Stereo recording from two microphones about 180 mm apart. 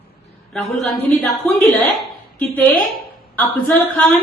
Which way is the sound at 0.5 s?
Centre (ahead or behind).